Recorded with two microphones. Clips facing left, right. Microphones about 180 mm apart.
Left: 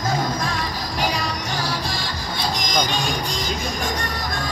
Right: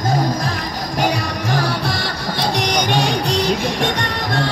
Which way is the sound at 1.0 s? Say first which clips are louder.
Right 5 dB; 55° right (ahead or behind).